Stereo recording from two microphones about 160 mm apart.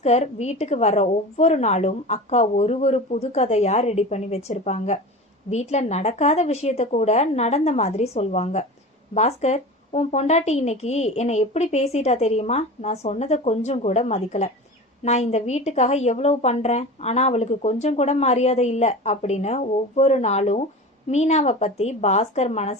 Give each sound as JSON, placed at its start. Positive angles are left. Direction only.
{"t": 0.0, "sound": "a woman's voice", "side_deg": 40}